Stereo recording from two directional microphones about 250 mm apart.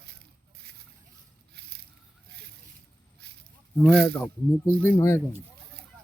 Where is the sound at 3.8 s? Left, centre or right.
Centre.